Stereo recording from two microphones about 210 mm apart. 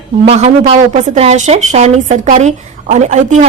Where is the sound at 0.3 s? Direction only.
30° right (ahead or behind).